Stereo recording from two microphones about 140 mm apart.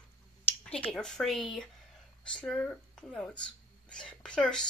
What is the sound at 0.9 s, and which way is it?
Speech, 5° left (ahead or behind).